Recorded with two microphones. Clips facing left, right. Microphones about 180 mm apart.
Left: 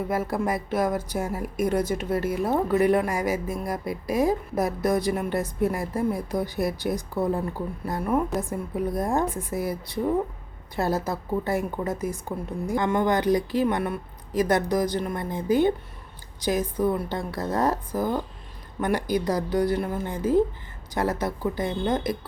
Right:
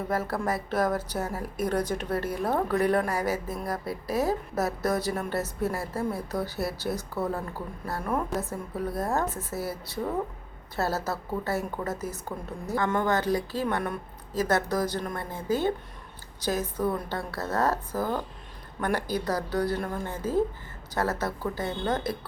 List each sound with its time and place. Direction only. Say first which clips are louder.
0.1 s a woman's voice: left 1 dB; 10° left (ahead or behind)
10.8 s a woman's voice: left 3 dB; 15° left (ahead or behind)